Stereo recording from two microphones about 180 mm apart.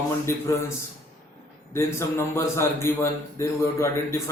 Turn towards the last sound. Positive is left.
turn(degrees=15)  # may be behind; listen again after turning